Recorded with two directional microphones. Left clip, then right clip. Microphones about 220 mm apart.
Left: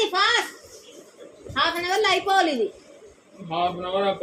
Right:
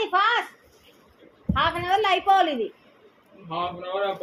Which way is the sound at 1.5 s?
20° left (ahead or behind).